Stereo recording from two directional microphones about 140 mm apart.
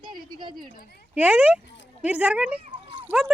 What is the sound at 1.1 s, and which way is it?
Speech, 10° right (ahead or behind).